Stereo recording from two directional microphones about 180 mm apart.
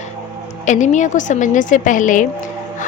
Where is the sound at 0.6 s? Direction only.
40° left (ahead or behind).